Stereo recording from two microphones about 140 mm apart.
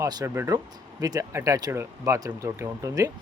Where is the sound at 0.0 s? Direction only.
25° right (ahead or behind).